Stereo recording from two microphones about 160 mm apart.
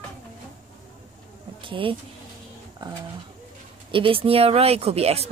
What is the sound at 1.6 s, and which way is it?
Speech, 30° right (ahead or behind).